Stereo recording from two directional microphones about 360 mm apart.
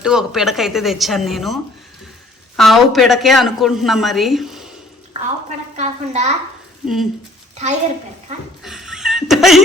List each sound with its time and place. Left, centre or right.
0.0 s a woman's voice: centre
2.6 s a woman's voice: centre
5.7 s a woman's voice: centre
6.8 s a woman's voice: centre
7.5 s a sound: centre
8.6 s a sound: centre